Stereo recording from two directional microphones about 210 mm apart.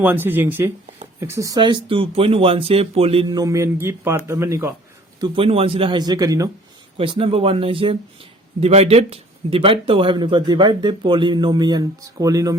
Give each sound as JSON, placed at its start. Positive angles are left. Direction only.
{"t": 0.0, "sound": "speech", "side_deg": -10}
{"t": 5.2, "sound": "speech", "side_deg": -25}